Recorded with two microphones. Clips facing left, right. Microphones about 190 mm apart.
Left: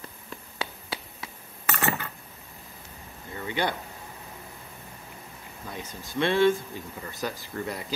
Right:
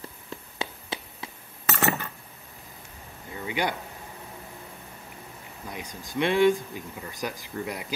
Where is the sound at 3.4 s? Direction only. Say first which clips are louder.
Even; 10° right (ahead or behind).